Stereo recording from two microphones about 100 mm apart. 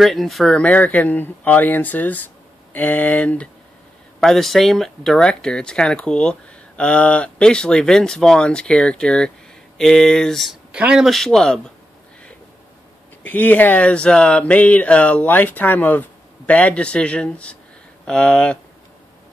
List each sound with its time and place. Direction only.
0.0 s speech: centre (ahead or behind)
4.2 s speech: 5° left (ahead or behind)
10.7 s speech: 10° right (ahead or behind)
11.1 s speech: 5° left (ahead or behind)
13.2 s speech: 15° left (ahead or behind)